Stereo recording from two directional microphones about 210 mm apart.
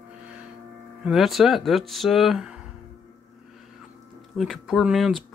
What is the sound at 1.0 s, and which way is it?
Speech, centre (ahead or behind).